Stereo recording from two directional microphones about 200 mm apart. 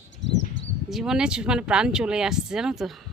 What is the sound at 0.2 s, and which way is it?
Bird, 65° left (ahead or behind).